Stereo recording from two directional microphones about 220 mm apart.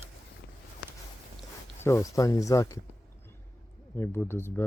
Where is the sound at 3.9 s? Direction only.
10° left (ahead or behind).